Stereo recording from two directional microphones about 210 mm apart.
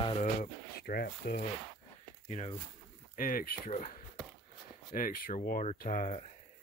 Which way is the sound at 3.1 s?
40° left (ahead or behind).